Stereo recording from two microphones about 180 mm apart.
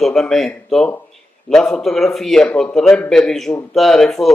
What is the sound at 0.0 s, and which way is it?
A man's voice, centre (ahead or behind).